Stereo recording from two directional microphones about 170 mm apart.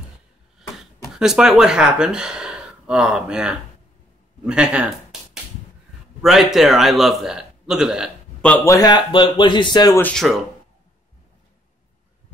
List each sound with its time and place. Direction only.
1.1 s speech: 5° right (ahead or behind)
4.5 s a sound: 5° right (ahead or behind)
6.2 s a man's voice: centre (ahead or behind)
8.5 s a man's voice: 10° left (ahead or behind)
8.7 s speech: 25° left (ahead or behind)
10.0 s speech: centre (ahead or behind)